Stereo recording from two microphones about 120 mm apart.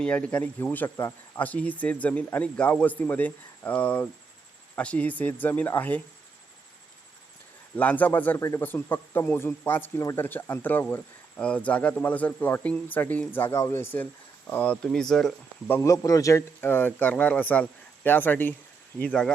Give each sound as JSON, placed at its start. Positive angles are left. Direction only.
{"t": 0.0, "sound": "speech", "side_deg": 10}
{"t": 7.8, "sound": "speech", "side_deg": 15}
{"t": 15.7, "sound": "speech", "side_deg": 25}
{"t": 16.6, "sound": "speech", "side_deg": 15}